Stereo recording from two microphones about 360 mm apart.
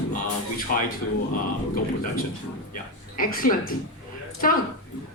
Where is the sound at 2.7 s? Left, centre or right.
Left.